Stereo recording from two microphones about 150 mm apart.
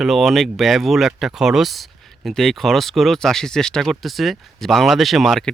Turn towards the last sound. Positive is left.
turn(degrees=0)  # may be behind; listen again after turning